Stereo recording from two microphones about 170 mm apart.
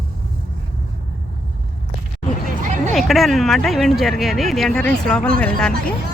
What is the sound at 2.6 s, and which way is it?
Hubbub, 45° right (ahead or behind).